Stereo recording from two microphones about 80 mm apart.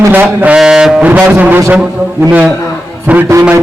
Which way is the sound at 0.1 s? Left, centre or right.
Right.